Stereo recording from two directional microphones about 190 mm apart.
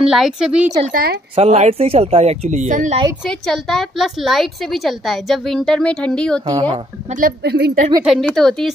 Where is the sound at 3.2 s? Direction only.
Centre (ahead or behind).